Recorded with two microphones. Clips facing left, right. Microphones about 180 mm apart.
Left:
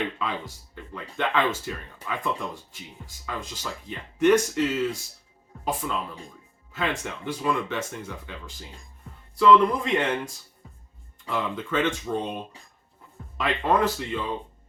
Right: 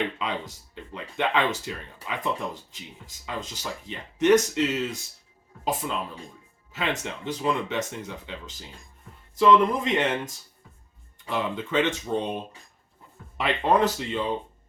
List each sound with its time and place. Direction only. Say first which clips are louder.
0.2 s speech: even; 20° right (ahead or behind)
11.3 s speech: right 1 dB; 20° right (ahead or behind)
13.3 s speech: right 1 dB; 20° right (ahead or behind)